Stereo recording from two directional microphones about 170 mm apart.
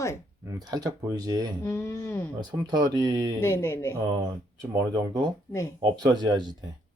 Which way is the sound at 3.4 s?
15° left (ahead or behind).